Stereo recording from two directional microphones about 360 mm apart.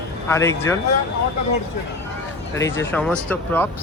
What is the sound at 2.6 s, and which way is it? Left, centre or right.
Speech, centre.